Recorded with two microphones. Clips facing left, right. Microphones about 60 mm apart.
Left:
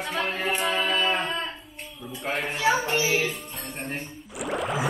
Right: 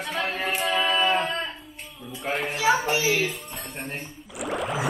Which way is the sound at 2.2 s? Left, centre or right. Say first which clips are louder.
Right 1 dB; centre.